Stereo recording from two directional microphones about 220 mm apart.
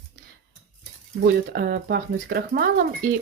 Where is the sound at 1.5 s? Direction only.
45° right (ahead or behind).